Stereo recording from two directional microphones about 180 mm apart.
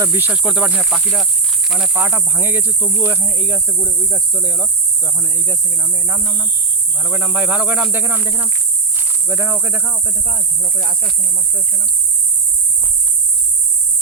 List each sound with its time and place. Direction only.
0.0 s speech: 15° right (ahead or behind)
5.0 s speech: 15° right (ahead or behind)
10.2 s speech: 45° right (ahead or behind)